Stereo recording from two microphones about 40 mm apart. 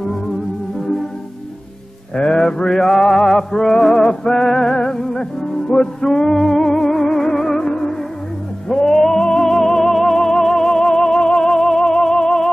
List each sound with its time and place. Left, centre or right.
2.1 s mantra: centre
3.0 s music: centre
3.3 s music: centre